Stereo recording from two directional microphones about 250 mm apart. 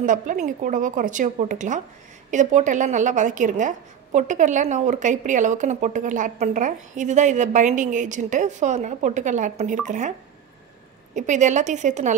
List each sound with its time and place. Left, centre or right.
0.0 s a woman's voice: right
11.1 s a woman's voice: right